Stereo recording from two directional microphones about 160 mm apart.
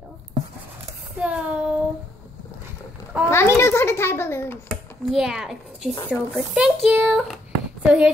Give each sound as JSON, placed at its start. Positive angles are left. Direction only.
{"t": 1.2, "sound": "child singing", "side_deg": -10}
{"t": 3.3, "sound": "a sound", "side_deg": 15}
{"t": 4.6, "sound": "a child's voice", "side_deg": -5}